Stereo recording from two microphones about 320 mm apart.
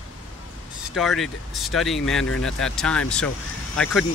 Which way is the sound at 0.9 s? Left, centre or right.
Centre.